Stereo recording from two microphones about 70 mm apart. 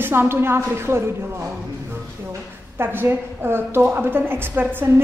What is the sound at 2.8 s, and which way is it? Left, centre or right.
A woman's voice, right.